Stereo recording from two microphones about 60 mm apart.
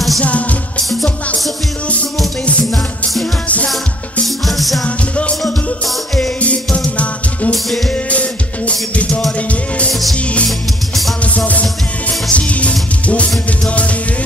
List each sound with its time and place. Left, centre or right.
4.5 s music: centre
4.8 s music: left
11.3 s music: left